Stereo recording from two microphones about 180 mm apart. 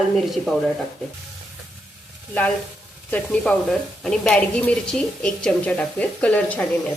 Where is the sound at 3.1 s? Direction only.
5° left (ahead or behind).